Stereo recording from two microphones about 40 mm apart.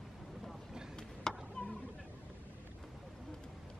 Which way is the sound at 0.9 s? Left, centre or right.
Centre.